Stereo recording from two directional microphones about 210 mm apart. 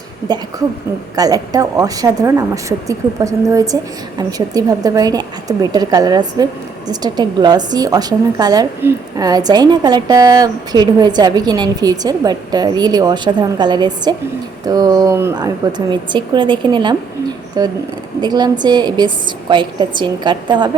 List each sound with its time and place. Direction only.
0.3 s a woman's voice: 20° right (ahead or behind)